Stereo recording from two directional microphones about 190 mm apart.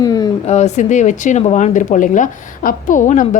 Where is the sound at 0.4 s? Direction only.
35° left (ahead or behind).